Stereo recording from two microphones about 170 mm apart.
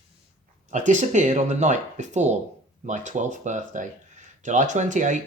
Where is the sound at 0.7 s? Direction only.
45° right (ahead or behind).